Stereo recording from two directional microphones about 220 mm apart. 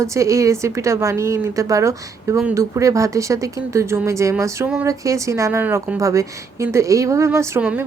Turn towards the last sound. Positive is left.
turn(degrees=-10)  # may be behind; listen again after turning